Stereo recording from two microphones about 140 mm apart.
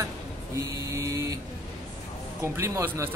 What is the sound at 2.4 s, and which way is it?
Speech, 20° right (ahead or behind).